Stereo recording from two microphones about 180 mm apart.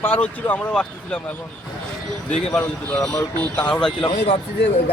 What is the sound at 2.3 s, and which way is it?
Speech, 10° left (ahead or behind).